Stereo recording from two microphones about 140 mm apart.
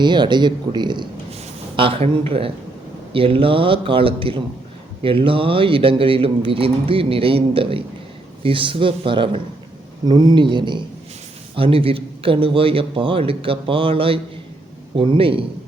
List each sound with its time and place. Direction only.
0.0 s speech: 35° right (ahead or behind)